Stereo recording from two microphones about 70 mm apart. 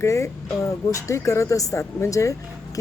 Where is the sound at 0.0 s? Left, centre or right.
Left.